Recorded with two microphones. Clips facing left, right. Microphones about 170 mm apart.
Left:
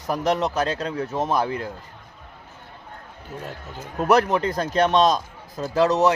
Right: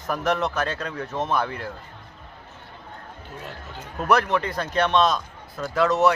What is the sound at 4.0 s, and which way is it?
Speech, 35° left (ahead or behind).